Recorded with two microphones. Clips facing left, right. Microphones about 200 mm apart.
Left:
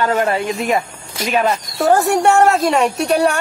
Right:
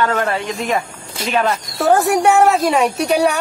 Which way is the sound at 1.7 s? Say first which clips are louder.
Even; centre (ahead or behind).